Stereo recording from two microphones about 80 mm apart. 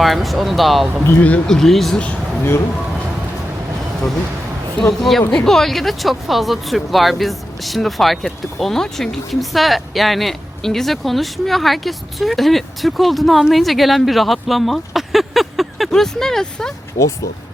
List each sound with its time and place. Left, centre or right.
0.0 s speech: centre
1.0 s speech: left
1.5 s speech: centre
2.0 s speech: centre
4.8 s speech: centre